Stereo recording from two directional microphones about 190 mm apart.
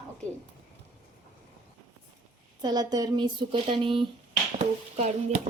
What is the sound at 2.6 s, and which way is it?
Speech, 20° right (ahead or behind).